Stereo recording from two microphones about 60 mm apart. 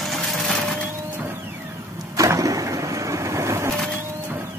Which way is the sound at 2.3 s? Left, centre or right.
Right.